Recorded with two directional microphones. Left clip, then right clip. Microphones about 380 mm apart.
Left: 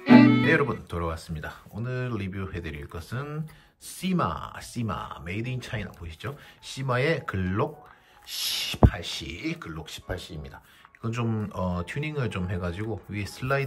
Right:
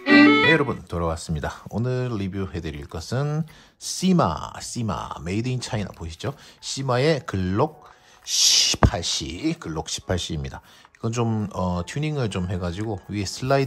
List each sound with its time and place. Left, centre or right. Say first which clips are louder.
0.0 s speech: right 4 dB; centre